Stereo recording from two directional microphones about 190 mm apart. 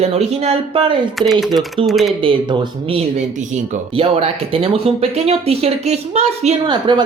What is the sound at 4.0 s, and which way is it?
Speech, 30° right (ahead or behind).